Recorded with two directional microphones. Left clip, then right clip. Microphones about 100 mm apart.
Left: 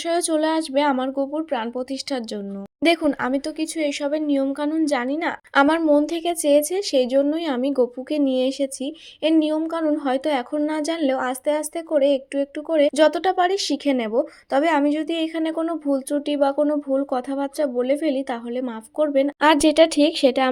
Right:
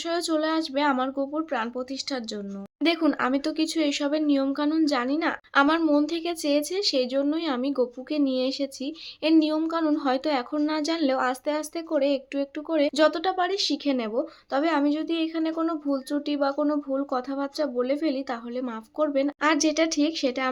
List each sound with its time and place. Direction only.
0.0 s speech: 30° left (ahead or behind)
1.0 s speech: 25° left (ahead or behind)
3.6 s speech: 20° left (ahead or behind)
10.0 s speech: 20° left (ahead or behind)
13.1 s speech: 45° left (ahead or behind)
15.6 s speech: 35° left (ahead or behind)
19.4 s speech: 55° left (ahead or behind)